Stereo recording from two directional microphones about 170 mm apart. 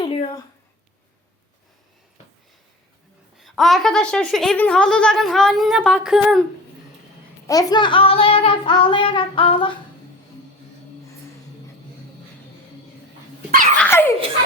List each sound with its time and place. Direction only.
0.0 s a sound: 30° left (ahead or behind)
3.3 s a woman's voice: centre (ahead or behind)
7.4 s child singing: 20° left (ahead or behind)
13.5 s dog: 50° right (ahead or behind)
13.7 s dog: 10° left (ahead or behind)